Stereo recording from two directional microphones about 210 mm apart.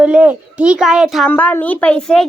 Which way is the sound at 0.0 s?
5° right (ahead or behind).